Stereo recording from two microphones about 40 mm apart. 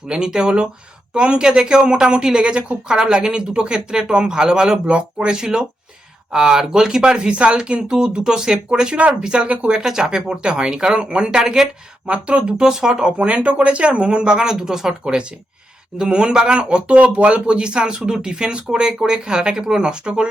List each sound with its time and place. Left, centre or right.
0.1 s speech: centre
9.5 s speech: right
9.7 s speech: centre
12.0 s speech: right
12.5 s speech: centre
13.1 s speech: right
14.5 s speech: centre